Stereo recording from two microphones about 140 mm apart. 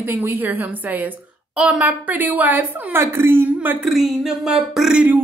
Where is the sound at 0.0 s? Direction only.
15° right (ahead or behind).